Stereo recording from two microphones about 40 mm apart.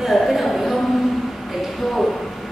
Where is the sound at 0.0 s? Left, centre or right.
Centre.